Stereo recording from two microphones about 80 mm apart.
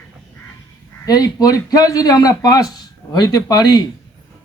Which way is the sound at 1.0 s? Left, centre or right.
Left.